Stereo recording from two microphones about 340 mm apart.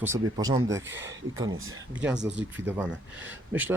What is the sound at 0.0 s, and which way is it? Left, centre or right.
Speech, centre.